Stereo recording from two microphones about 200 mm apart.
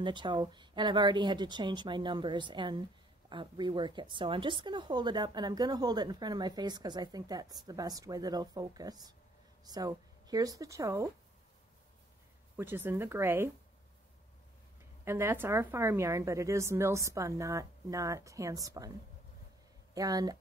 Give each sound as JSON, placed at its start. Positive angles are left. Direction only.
{"t": 0.0, "sound": "a woman's voice", "side_deg": -25}
{"t": 12.5, "sound": "a woman's voice", "side_deg": -10}
{"t": 15.0, "sound": "a woman's voice", "side_deg": -15}